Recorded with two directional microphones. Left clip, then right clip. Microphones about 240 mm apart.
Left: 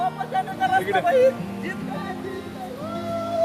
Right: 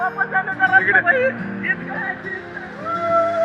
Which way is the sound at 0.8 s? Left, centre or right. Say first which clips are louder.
Right 11 dB; centre.